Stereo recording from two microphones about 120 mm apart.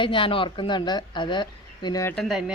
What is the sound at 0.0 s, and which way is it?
A woman's voice, 45° left (ahead or behind).